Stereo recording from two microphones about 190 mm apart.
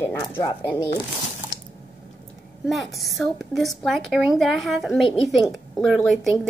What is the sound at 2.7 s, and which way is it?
A woman's voice, centre (ahead or behind).